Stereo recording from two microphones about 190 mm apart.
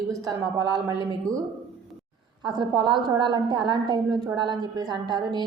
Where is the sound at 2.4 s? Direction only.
20° right (ahead or behind).